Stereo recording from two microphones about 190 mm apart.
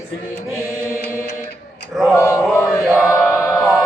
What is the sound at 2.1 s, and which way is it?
Male singing, 15° left (ahead or behind).